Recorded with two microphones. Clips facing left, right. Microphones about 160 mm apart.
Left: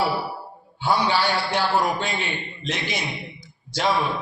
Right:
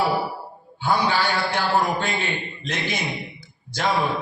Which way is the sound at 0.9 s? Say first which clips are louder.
Even; 50° right (ahead or behind).